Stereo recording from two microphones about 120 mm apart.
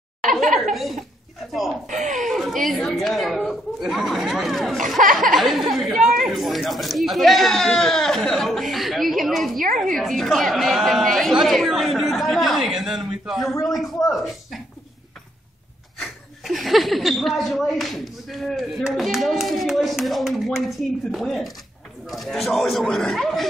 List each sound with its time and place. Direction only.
0.7 s speech: centre (ahead or behind)
5.0 s speech: 90° right
5.3 s speech: centre (ahead or behind)
16.0 s speech: centre (ahead or behind)